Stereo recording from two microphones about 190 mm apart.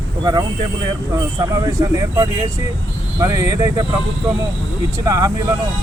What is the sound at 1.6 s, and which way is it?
Speech, 15° right (ahead or behind).